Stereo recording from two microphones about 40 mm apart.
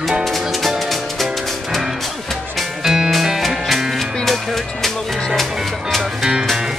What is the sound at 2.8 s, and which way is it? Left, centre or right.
Music, centre.